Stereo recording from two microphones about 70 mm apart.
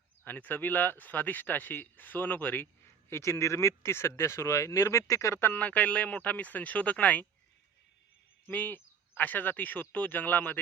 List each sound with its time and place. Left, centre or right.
0.3 s speech: left
3.1 s speech: left
5.4 s speech: left
8.4 s speech: left